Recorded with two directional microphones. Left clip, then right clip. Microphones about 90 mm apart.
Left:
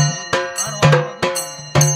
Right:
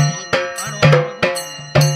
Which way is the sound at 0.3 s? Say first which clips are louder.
Right 2 dB; 30° left (ahead or behind).